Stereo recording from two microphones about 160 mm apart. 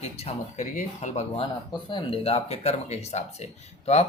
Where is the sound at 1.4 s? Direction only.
30° left (ahead or behind).